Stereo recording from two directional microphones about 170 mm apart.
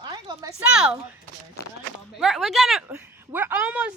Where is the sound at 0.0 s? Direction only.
25° right (ahead or behind).